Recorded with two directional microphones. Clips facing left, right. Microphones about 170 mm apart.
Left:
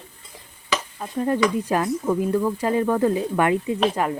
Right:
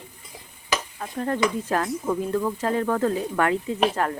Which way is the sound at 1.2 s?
10° left (ahead or behind).